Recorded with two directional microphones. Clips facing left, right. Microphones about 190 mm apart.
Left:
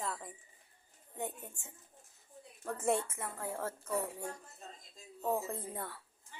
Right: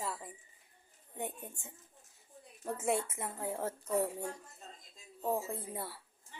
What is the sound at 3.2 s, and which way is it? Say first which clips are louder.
Speech: right 2 dB; 20° right (ahead or behind).